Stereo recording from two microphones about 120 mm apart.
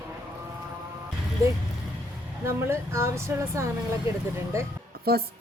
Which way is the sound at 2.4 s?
20° right (ahead or behind).